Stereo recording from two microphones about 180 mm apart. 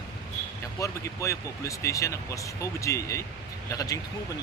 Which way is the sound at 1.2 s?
15° left (ahead or behind).